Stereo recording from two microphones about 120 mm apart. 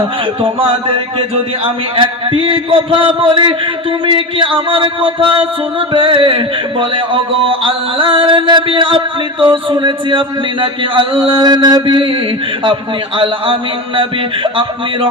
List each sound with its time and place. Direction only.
0.4 s speech: 50° right (ahead or behind)
13.1 s speech: 45° right (ahead or behind)